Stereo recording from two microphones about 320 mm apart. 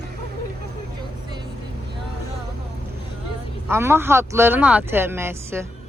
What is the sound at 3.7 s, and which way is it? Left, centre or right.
Speech, centre.